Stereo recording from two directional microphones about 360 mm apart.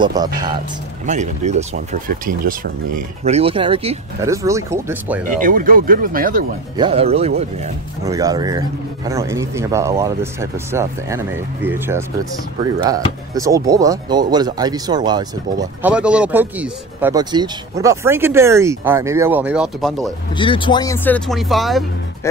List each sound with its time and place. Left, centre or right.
0.0 s speech: centre
5.4 s speech: right; by 12.0 s centre
13.3 s speech: centre
20.3 s speech: centre